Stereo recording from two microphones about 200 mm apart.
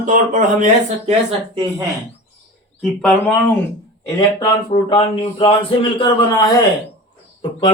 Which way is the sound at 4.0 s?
20° left (ahead or behind).